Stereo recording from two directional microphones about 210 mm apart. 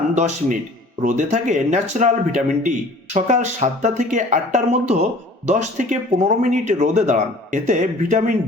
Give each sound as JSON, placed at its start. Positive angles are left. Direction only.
{"t": 0.1, "sound": "speech", "side_deg": -35}